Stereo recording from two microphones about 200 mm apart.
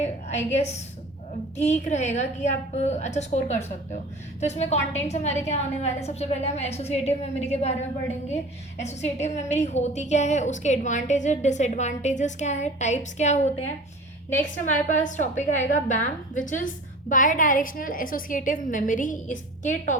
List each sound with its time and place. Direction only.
0.0 s a woman's voice: 35° left (ahead or behind)
8.8 s a woman's voice: 35° left (ahead or behind)
14.7 s a woman's voice: 40° left (ahead or behind)